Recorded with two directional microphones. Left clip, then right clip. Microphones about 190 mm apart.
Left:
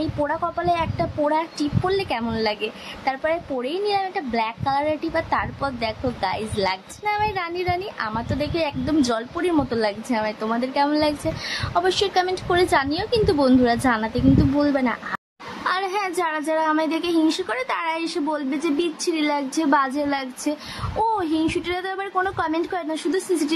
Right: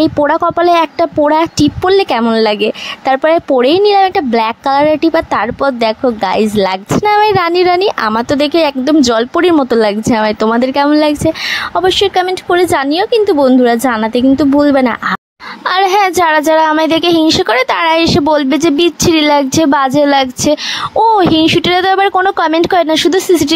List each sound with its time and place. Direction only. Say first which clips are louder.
0.0 s speech: right 14 dB; 45° right (ahead or behind)